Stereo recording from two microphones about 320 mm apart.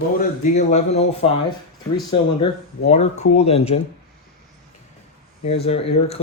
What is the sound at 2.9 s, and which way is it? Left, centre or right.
Speech, left.